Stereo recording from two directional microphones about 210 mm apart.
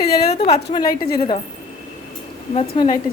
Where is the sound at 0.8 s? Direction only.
45° left (ahead or behind).